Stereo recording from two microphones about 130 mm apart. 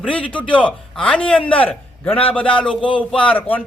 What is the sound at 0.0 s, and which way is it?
A man's voice, 10° left (ahead or behind).